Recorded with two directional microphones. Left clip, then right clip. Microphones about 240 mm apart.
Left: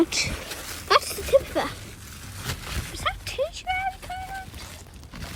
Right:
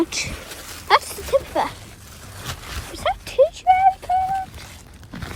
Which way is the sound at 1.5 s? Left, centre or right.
Centre.